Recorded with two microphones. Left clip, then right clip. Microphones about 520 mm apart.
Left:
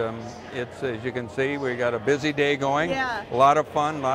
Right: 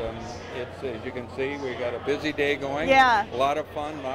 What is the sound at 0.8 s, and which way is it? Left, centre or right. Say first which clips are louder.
A man's voice: left 4 dB; left.